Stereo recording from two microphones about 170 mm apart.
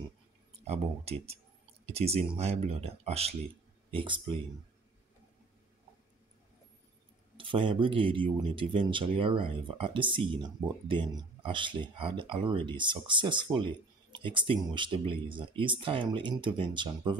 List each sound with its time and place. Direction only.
0.7 s speech: 35° right (ahead or behind)
7.3 s speech: 30° right (ahead or behind)